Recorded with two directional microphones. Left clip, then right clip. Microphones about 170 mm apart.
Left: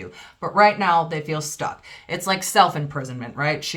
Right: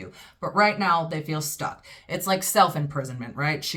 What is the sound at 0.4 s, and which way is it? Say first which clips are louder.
A woman's voice: left 5 dB; 20° left (ahead or behind).